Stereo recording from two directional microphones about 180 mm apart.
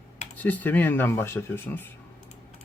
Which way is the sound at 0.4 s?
10° left (ahead or behind).